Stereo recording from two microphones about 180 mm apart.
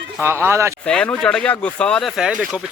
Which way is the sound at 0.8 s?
5° left (ahead or behind).